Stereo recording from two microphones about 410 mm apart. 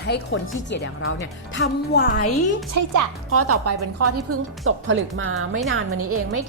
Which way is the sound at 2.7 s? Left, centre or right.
Right.